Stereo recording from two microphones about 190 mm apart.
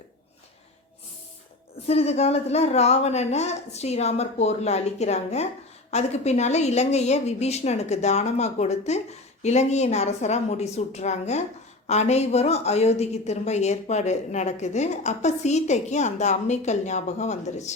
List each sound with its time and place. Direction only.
1.9 s a woman's voice: 35° left (ahead or behind)